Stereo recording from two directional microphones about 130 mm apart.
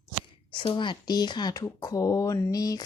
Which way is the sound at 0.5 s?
40° left (ahead or behind).